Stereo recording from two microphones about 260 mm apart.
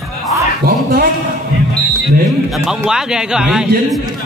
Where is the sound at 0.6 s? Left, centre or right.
Right.